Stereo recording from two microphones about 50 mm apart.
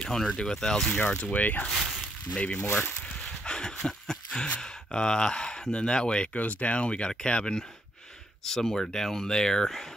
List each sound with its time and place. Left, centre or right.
0.0 s speech: centre
1.2 s speech: left
1.7 s speech: centre
2.3 s speech: centre
2.6 s speech: left
3.4 s speech: centre